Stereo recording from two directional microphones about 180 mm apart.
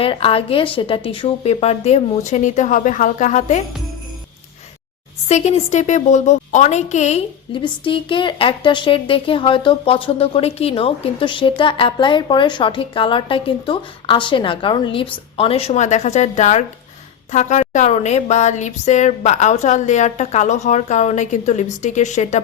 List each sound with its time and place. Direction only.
0.0 s speech: 30° left (ahead or behind)
5.3 s a woman's voice: 35° left (ahead or behind)